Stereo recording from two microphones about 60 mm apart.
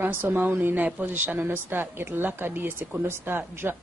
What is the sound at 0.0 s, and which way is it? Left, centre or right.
A woman's voice, right.